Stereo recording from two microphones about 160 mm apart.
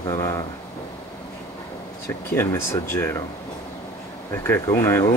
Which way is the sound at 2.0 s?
15° left (ahead or behind).